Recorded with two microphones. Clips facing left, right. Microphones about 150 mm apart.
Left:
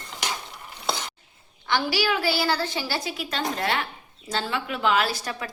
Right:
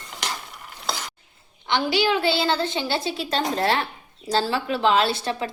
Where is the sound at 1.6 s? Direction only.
20° right (ahead or behind).